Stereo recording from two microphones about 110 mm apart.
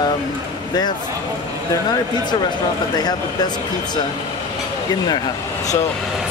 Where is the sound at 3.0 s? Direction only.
40° left (ahead or behind).